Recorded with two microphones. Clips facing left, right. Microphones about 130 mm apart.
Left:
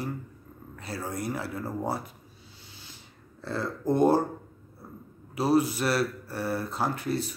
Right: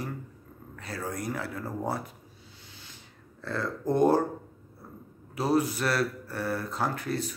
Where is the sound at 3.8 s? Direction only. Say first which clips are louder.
Left 1 dB; 5° left (ahead or behind).